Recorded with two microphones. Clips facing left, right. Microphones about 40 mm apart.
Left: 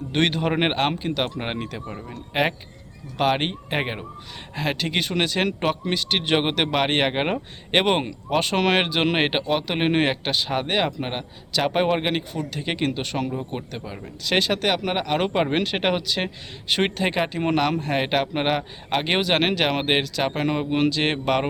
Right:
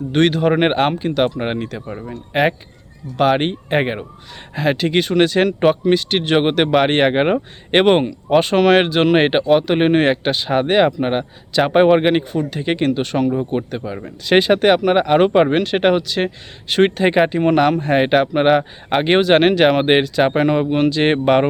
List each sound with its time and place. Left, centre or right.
0.1 s speech: centre
12.0 s speech: centre
15.5 s speech: centre